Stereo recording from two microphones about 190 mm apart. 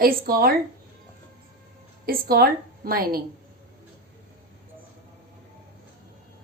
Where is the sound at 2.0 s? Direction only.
50° right (ahead or behind).